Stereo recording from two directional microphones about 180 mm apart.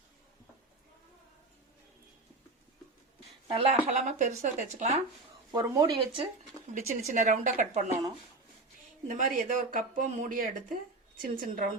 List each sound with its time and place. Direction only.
3.5 s speech: 35° right (ahead or behind)
5.5 s speech: 20° right (ahead or behind)
6.7 s speech: 40° right (ahead or behind)
9.0 s speech: 50° right (ahead or behind)